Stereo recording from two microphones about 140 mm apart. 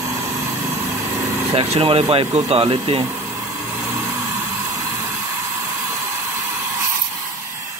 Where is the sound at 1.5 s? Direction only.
45° right (ahead or behind).